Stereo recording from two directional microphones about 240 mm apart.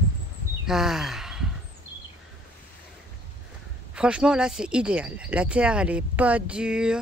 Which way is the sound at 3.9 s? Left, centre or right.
Centre.